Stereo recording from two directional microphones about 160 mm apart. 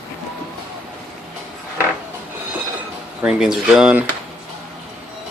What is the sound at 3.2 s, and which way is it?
Speech, 5° right (ahead or behind).